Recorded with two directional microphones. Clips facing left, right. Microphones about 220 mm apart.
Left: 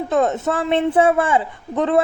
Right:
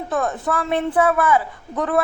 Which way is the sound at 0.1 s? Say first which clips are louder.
Left 4 dB; 25° left (ahead or behind).